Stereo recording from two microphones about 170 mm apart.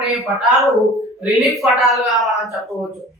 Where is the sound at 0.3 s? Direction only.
Centre (ahead or behind).